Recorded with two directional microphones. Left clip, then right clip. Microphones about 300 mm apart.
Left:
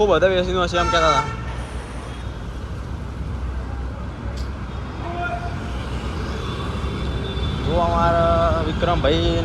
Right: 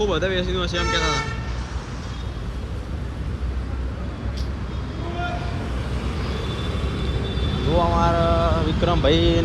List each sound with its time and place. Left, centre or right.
0.0 s speech: centre
7.8 s speech: centre